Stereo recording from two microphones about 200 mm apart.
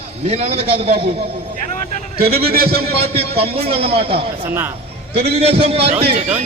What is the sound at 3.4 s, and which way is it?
A man's voice, 30° right (ahead or behind).